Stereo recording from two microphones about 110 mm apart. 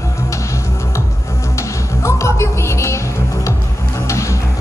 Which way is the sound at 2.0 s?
25° left (ahead or behind).